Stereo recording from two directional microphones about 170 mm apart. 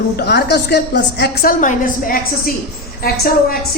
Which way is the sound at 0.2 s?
75° left (ahead or behind).